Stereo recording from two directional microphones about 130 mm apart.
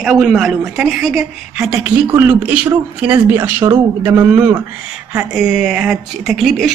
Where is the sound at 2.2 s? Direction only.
15° right (ahead or behind).